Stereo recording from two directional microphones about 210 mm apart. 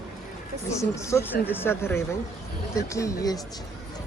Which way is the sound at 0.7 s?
15° left (ahead or behind).